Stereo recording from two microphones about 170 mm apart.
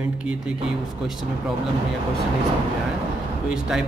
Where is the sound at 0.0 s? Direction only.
5° right (ahead or behind).